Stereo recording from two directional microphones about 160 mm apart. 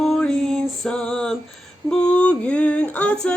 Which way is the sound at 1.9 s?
5° left (ahead or behind).